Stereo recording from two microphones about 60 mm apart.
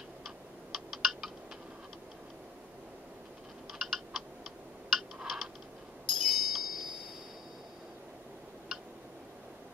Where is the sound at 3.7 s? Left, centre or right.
Centre.